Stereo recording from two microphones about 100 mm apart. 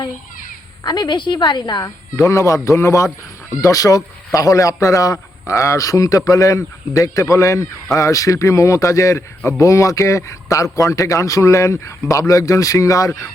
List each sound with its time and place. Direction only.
0.9 s a woman's voice: 45° left (ahead or behind)
2.1 s a man's voice: 30° left (ahead or behind)